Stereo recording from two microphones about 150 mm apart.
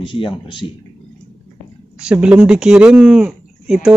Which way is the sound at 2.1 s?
5° right (ahead or behind).